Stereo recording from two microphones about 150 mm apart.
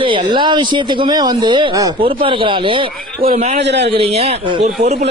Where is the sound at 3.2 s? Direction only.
55° right (ahead or behind).